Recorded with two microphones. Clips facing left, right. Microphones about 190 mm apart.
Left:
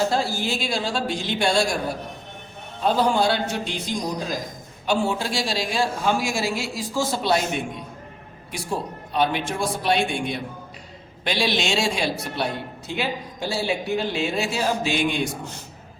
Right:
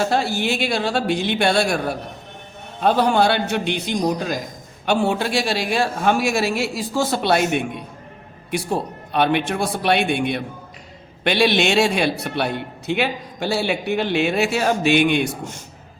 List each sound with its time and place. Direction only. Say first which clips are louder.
0.0 s a man's voice: right 3 dB; 65° right (ahead or behind)
2.8 s a man's voice: right 3 dB; 65° right (ahead or behind)